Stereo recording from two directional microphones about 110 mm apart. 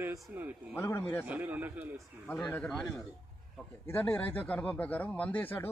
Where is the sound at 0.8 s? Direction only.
20° left (ahead or behind).